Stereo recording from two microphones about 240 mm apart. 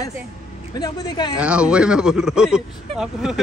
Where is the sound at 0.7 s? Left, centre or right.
Centre.